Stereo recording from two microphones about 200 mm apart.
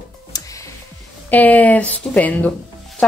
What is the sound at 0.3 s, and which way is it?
Music, 20° left (ahead or behind).